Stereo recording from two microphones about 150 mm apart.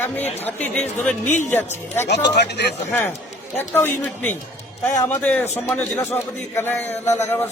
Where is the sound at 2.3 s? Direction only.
90° left.